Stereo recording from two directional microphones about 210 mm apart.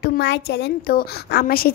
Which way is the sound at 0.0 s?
50° left (ahead or behind).